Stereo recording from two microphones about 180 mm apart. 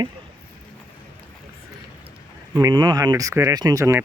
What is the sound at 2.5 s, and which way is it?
Speech, 25° right (ahead or behind).